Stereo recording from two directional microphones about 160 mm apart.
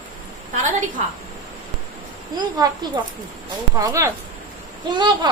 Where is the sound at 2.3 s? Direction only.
25° right (ahead or behind).